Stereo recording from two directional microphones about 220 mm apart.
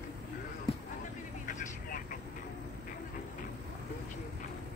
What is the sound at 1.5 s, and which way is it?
Vehicle, 40° left (ahead or behind).